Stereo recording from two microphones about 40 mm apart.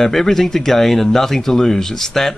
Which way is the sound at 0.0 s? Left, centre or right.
Centre.